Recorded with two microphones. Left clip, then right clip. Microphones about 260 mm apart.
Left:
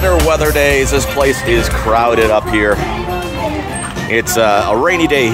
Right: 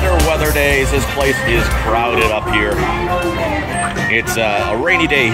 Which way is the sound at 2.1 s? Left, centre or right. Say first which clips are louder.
Left 3 dB; left.